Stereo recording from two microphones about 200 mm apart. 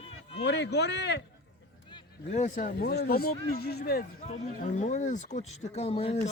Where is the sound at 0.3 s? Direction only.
60° left (ahead or behind).